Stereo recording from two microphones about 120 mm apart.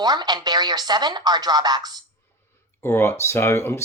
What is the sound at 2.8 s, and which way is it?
Speech, 20° left (ahead or behind).